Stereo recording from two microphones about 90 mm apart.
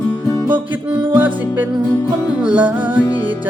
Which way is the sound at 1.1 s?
20° right (ahead or behind).